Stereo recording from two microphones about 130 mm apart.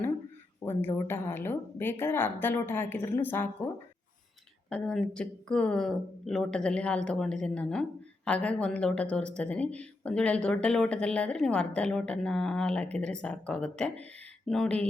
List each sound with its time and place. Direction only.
0.6 s speech: 15° left (ahead or behind)
4.7 s speech: 5° left (ahead or behind)